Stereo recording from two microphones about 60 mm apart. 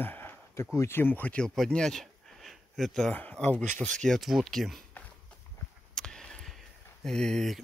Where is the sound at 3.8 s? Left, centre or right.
Centre.